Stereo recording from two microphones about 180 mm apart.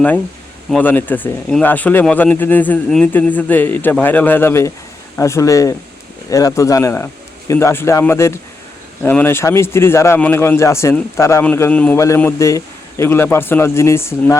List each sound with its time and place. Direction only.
0.7 s a man's voice: 10° left (ahead or behind)